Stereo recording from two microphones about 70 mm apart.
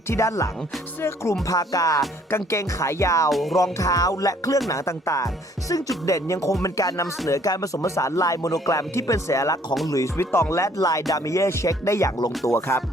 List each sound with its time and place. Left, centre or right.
0.1 s speech: left
1.0 s music: left
1.5 s music: left
2.3 s speech: left
3.2 s music: centre
3.6 s music: left
4.7 s speech: left
10.2 s speech: left
12.5 s music: left